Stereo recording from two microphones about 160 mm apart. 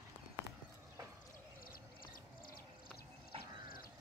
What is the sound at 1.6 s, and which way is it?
Music, 65° left (ahead or behind).